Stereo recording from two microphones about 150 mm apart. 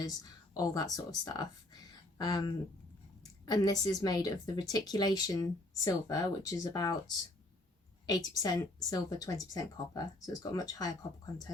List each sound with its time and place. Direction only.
0.0 s a woman's voice: 25° left (ahead or behind)
8.0 s a woman's voice: 25° left (ahead or behind)